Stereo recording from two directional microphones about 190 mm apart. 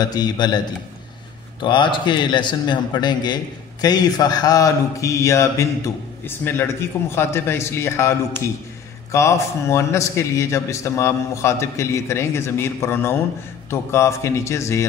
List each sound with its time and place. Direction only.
0.0 s speech: 20° left (ahead or behind)
1.6 s a man's voice: 25° left (ahead or behind)